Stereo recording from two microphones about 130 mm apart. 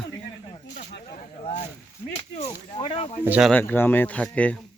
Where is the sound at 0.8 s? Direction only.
65° left (ahead or behind).